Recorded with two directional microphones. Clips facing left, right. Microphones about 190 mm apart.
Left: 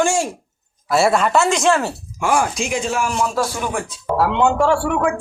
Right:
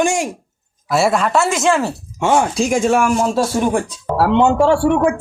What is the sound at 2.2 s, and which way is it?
Speech, 25° right (ahead or behind).